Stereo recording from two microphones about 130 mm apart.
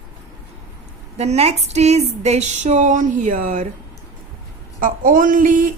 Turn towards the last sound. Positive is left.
turn(degrees=-90)